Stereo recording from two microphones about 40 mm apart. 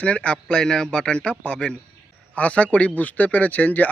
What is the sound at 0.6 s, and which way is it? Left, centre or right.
A man's voice, centre.